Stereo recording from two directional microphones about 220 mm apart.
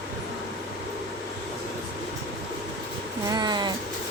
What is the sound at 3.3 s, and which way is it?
Speech, 20° right (ahead or behind).